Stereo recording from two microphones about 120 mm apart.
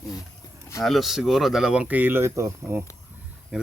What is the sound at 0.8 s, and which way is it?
Speech, centre (ahead or behind).